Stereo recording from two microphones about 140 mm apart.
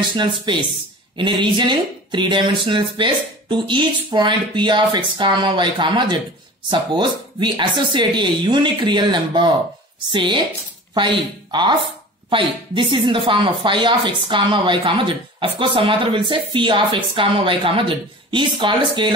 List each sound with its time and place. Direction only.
0.5 s speech: 35° right (ahead or behind)